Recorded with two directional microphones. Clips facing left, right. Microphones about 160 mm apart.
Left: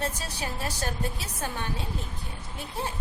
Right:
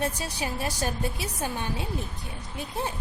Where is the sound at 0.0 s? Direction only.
15° right (ahead or behind).